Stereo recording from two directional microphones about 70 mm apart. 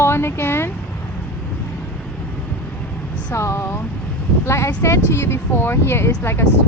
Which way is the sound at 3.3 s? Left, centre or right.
Left.